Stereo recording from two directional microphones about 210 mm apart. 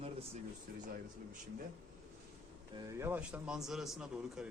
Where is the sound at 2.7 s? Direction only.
15° right (ahead or behind).